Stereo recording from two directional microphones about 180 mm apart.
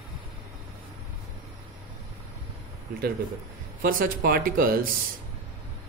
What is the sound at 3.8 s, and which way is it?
Speech, 50° right (ahead or behind).